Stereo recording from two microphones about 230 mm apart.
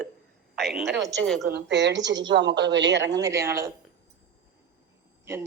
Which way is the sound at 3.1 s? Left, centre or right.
Centre.